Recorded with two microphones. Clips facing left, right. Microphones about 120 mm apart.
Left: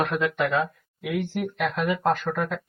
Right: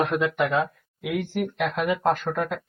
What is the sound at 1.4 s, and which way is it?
Speech, centre (ahead or behind).